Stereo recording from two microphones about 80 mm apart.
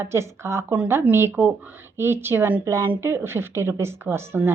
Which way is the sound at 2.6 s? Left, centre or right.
Right.